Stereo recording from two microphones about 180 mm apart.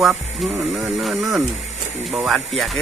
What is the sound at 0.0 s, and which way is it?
Speech, centre (ahead or behind).